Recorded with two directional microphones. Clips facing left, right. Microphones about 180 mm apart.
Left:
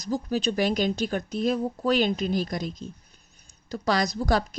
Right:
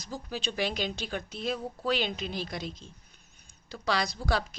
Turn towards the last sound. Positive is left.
turn(degrees=45)  # may be behind; listen again after turning